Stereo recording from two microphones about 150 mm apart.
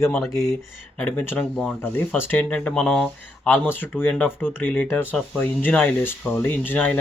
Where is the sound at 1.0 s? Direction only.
10° left (ahead or behind).